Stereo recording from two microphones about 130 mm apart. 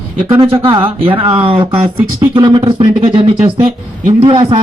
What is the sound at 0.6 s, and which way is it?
Speech, 45° right (ahead or behind).